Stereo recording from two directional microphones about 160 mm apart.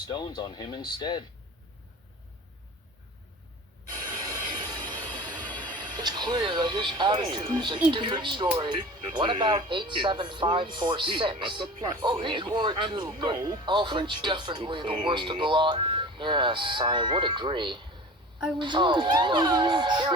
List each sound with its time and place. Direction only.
0.1 s speech: 30° left (ahead or behind)
4.2 s train: 25° right (ahead or behind)
7.9 s speech: 30° right (ahead or behind)